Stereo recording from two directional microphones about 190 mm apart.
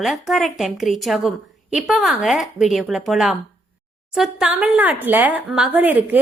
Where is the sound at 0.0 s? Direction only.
Centre (ahead or behind).